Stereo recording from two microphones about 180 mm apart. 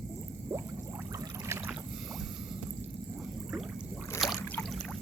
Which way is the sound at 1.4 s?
15° right (ahead or behind).